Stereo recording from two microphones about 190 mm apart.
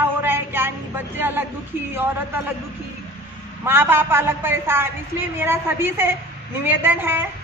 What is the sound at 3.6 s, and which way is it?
A woman's voice, 10° right (ahead or behind).